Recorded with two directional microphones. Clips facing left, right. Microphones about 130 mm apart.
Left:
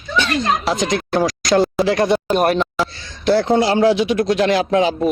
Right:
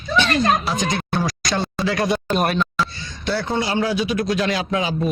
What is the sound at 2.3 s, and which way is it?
Speech, 15° left (ahead or behind).